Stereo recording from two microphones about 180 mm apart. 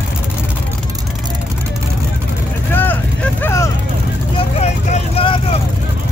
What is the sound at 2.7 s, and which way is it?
Vehicle, 10° left (ahead or behind).